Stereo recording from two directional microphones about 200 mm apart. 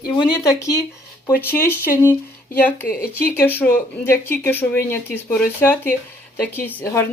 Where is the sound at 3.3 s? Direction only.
10° left (ahead or behind).